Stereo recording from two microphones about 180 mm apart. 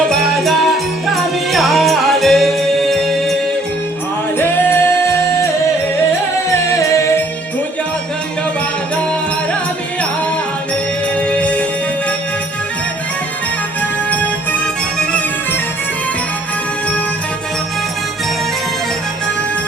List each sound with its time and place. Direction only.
0.1 s music: centre (ahead or behind)
4.4 s music: 10° left (ahead or behind)
6.7 s music: 15° left (ahead or behind)
11.1 s music: 5° left (ahead or behind)
14.9 s music: 5° left (ahead or behind)